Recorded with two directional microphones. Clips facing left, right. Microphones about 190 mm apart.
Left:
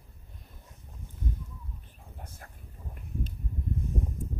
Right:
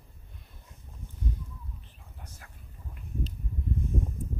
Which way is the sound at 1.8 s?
50° left (ahead or behind).